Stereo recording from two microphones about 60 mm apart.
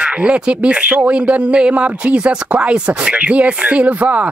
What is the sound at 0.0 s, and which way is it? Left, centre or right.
Speech, centre.